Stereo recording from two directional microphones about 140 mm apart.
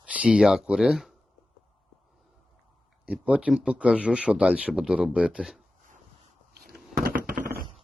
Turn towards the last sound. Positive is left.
turn(degrees=-90)